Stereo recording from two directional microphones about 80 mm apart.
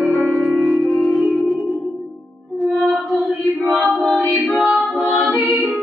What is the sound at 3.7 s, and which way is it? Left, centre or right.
A capella, centre.